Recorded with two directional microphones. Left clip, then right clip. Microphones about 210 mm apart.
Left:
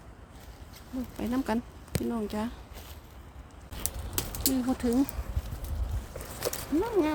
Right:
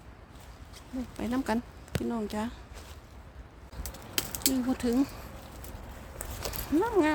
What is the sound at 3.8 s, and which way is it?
Typing, 55° left (ahead or behind).